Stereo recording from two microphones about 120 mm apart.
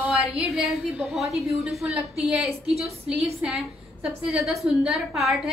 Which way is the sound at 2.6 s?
60° right (ahead or behind).